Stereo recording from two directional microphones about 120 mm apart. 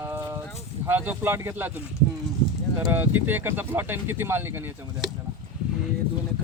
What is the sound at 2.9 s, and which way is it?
Speech, 15° right (ahead or behind).